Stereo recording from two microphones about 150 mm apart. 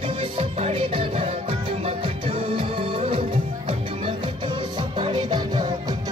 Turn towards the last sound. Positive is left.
turn(degrees=-30)  # may be behind; listen again after turning